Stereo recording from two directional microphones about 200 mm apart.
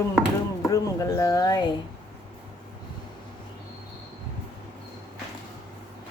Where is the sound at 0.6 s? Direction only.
15° left (ahead or behind).